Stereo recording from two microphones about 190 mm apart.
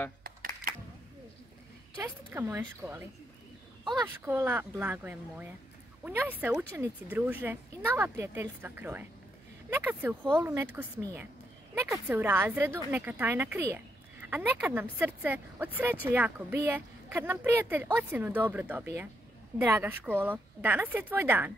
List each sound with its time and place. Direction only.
0.2 s a sound: 50° right (ahead or behind)
2.0 s a woman's voice: 10° right (ahead or behind)
4.3 s a woman's voice: 10° right (ahead or behind)